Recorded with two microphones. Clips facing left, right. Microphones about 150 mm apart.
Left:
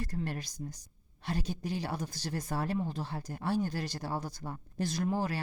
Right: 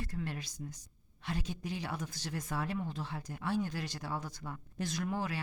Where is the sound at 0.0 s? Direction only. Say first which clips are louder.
Left 3 dB; 40° left (ahead or behind).